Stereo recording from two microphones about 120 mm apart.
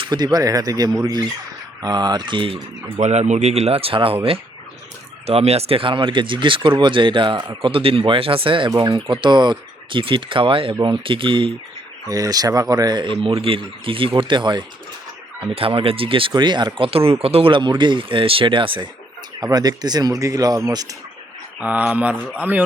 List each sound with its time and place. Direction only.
0.0 s speech: 35° right (ahead or behind)
3.0 s speech: 70° right (ahead or behind); by 11.5 s 45° right (ahead or behind)
12.0 s speech: 30° right (ahead or behind)
13.1 s speech: 50° right (ahead or behind)
15.4 s speech: 50° right (ahead or behind)
19.4 s speech: 30° right (ahead or behind)
21.6 s speech: 15° right (ahead or behind)